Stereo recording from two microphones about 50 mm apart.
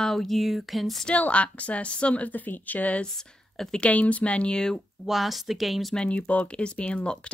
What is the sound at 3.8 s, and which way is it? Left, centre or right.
A woman's voice, left.